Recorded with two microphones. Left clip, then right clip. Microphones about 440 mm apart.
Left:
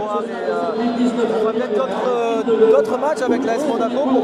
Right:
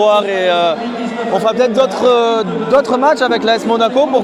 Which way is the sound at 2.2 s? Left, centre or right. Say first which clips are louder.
Right 2 dB; right.